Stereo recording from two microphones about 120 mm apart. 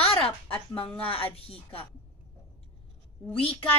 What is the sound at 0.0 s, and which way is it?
A woman's voice, 50° left (ahead or behind).